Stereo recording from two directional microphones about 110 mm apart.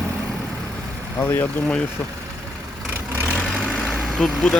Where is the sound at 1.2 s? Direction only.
20° left (ahead or behind).